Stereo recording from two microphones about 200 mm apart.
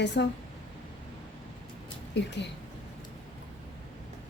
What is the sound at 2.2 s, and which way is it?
Speech, 60° left (ahead or behind).